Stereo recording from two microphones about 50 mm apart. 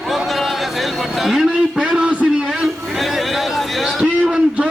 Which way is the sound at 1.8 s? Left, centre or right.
Centre.